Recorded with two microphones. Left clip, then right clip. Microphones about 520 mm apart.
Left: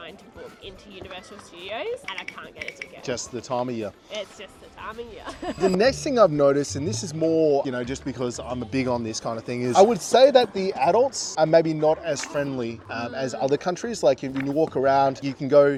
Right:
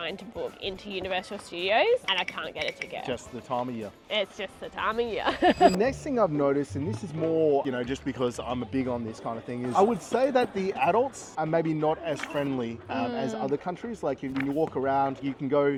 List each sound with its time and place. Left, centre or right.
0.6 s speech: right
2.0 s speech: centre
3.1 s speech: centre
4.1 s speech: right
5.8 s speech: centre